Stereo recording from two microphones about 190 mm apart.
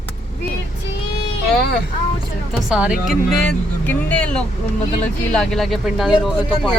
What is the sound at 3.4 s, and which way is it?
Speech, 5° left (ahead or behind).